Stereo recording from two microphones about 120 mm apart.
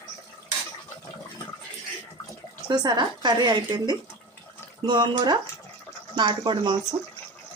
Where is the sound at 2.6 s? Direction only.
35° right (ahead or behind).